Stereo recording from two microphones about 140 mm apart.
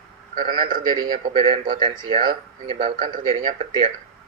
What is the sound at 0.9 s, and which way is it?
A man's voice, 35° right (ahead or behind).